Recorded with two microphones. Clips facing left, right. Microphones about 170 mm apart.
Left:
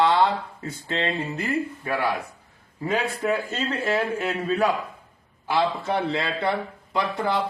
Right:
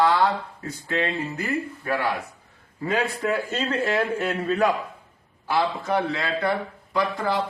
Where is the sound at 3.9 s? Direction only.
10° left (ahead or behind).